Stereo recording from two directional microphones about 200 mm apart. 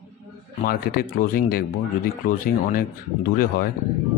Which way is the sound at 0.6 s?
45° left (ahead or behind).